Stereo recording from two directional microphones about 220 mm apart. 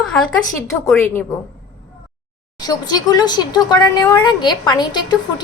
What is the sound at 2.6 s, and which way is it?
Speech, 20° left (ahead or behind).